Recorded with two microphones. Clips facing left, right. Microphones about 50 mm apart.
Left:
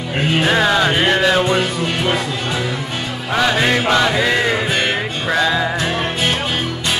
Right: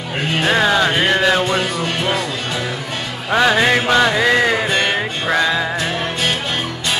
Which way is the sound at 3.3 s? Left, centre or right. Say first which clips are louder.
Right 3 dB; centre.